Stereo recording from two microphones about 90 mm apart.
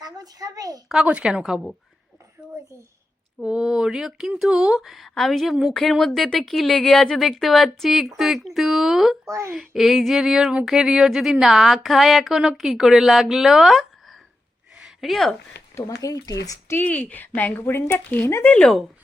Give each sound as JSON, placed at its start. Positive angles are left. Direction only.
{"t": 0.0, "sound": "a child's voice", "side_deg": -45}
{"t": 1.0, "sound": "speech", "side_deg": -10}
{"t": 3.4, "sound": "speech", "side_deg": -10}
{"t": 9.2, "sound": "speech", "side_deg": -35}
{"t": 9.5, "sound": "speech", "side_deg": 0}
{"t": 14.8, "sound": "a sound", "side_deg": -5}
{"t": 15.7, "sound": "speech", "side_deg": 40}
{"t": 16.6, "sound": "a woman's voice", "side_deg": 20}
{"t": 18.5, "sound": "speech", "side_deg": 10}